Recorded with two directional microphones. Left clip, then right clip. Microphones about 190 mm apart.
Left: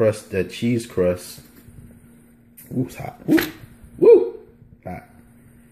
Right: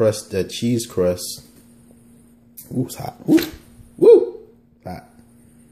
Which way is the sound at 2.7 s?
5° right (ahead or behind).